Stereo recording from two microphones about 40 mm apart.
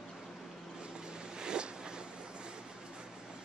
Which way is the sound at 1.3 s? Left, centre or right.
Centre.